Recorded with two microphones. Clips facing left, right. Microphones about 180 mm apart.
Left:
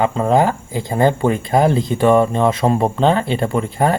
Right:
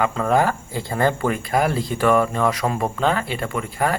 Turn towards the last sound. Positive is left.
turn(degrees=30)  # may be behind; listen again after turning